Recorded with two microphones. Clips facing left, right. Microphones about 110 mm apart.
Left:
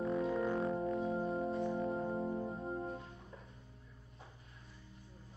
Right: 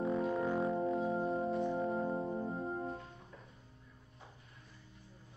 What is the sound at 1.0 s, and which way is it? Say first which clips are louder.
Organ: right 2 dB; 30° right (ahead or behind).